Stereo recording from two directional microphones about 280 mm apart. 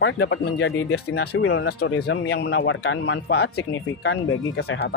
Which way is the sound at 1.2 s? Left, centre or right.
Left.